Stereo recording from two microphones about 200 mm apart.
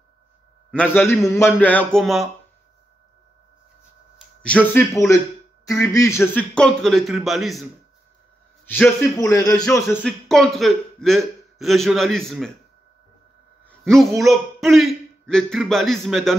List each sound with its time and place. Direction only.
0.7 s a man's voice: 5° left (ahead or behind)
4.4 s a man's voice: 5° left (ahead or behind)
8.6 s a man's voice: 10° left (ahead or behind)
10.2 s a man's voice: centre (ahead or behind)
13.7 s a man's voice: centre (ahead or behind)